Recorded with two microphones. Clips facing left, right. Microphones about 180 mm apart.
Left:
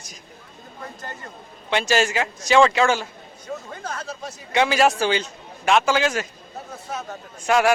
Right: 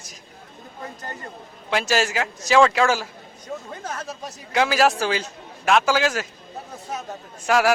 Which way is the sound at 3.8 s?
20° right (ahead or behind).